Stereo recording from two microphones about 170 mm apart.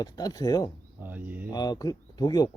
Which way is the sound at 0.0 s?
20° left (ahead or behind).